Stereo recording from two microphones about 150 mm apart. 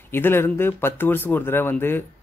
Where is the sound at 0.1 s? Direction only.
15° left (ahead or behind).